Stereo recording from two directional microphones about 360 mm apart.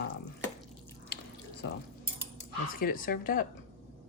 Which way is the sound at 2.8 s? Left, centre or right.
Left.